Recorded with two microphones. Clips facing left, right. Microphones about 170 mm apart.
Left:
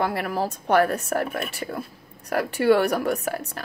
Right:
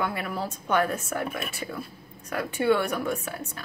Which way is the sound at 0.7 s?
65° left (ahead or behind).